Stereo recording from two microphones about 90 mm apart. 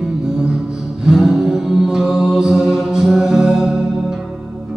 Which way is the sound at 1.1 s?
Centre (ahead or behind).